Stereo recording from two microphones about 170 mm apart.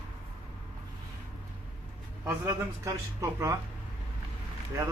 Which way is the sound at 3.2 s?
15° right (ahead or behind).